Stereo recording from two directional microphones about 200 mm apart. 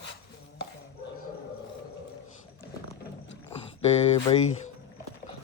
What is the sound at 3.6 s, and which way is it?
Speech, 30° left (ahead or behind).